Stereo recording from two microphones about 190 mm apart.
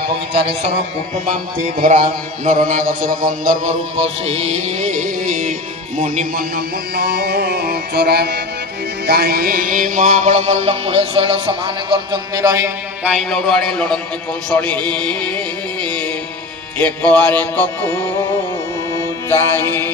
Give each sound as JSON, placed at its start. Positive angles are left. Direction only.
{"t": 1.2, "sound": "music", "side_deg": -40}
{"t": 13.1, "sound": "a man's voice", "side_deg": 0}
{"t": 14.5, "sound": "music", "side_deg": 10}
{"t": 18.9, "sound": "mantra", "side_deg": 15}